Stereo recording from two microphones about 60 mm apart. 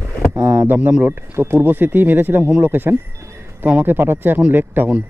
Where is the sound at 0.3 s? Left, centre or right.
Right.